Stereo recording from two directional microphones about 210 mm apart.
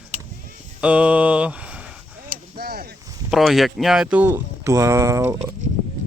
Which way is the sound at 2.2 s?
45° right (ahead or behind).